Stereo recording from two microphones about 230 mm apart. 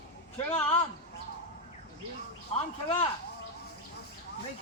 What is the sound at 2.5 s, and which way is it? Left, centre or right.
Speech, left.